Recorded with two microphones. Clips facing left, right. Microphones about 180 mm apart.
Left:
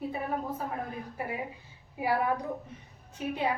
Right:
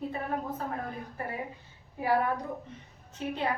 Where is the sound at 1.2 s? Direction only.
10° left (ahead or behind).